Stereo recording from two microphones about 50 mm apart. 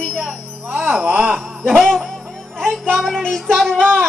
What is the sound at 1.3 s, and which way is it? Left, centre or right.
Music, centre.